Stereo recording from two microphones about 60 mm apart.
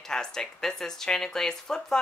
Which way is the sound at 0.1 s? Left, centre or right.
Centre.